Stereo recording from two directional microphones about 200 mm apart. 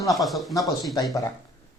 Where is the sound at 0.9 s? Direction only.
20° left (ahead or behind).